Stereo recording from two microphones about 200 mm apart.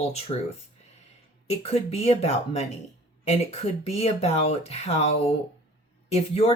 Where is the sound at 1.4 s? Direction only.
30° left (ahead or behind).